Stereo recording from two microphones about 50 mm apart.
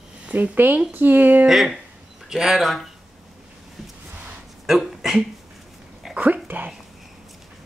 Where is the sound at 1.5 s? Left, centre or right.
Centre.